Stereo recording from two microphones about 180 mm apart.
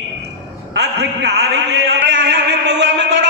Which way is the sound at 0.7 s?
65° right (ahead or behind).